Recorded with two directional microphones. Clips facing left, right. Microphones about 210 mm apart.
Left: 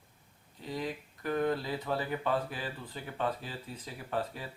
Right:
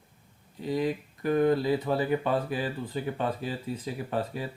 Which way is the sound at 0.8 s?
15° right (ahead or behind).